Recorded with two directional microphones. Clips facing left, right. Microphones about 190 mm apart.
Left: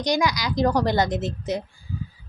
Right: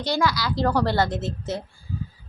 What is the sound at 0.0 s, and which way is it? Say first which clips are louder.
A woman's voice: left 1 dB; 15° left (ahead or behind).